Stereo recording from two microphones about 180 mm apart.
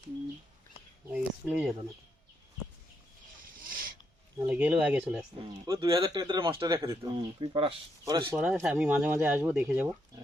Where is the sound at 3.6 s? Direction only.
50° right (ahead or behind).